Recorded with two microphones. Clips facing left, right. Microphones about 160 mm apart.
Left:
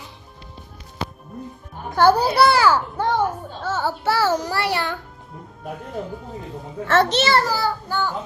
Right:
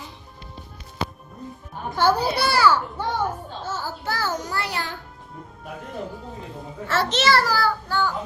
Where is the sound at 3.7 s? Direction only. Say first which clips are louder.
Left 9 dB; 75° left (ahead or behind).